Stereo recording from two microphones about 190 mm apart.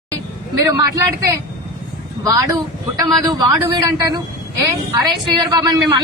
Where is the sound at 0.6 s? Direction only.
20° right (ahead or behind).